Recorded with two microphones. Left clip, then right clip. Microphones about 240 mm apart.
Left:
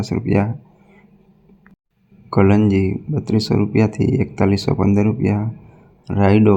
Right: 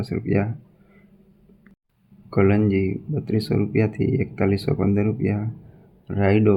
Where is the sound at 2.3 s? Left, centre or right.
Centre.